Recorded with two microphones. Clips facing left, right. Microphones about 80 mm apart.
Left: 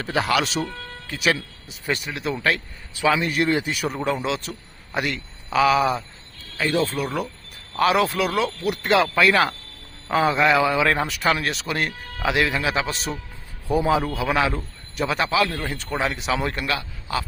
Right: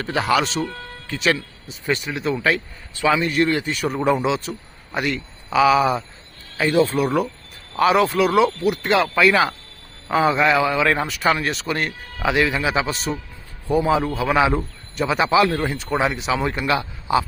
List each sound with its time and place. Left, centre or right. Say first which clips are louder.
0.0 s a man's voice: right 2 dB; centre
15.3 s speech: right 5 dB; right
15.7 s a man's voice: right 4 dB; centre
16.6 s a man's voice: right 6 dB; centre